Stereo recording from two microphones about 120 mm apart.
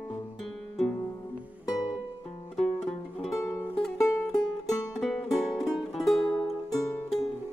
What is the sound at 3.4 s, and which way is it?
Music, 25° left (ahead or behind).